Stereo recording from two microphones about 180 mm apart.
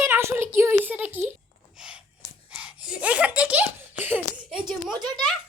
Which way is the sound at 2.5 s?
5° right (ahead or behind).